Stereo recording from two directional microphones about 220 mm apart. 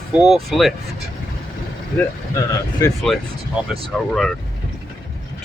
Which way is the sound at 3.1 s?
Centre (ahead or behind).